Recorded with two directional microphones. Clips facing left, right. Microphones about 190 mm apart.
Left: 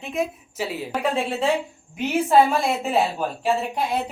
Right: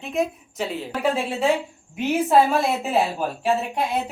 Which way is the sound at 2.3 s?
Centre (ahead or behind).